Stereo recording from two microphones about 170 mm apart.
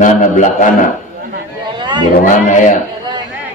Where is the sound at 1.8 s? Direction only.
25° right (ahead or behind).